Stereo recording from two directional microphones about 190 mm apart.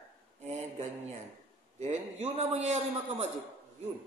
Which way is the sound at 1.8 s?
35° right (ahead or behind).